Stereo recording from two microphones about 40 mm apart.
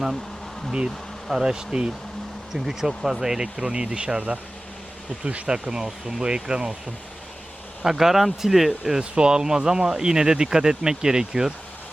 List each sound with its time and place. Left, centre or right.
1.3 s speech: centre; by 5.5 s right
5.6 s speech: centre
7.8 s speech: centre
9.0 s speech: right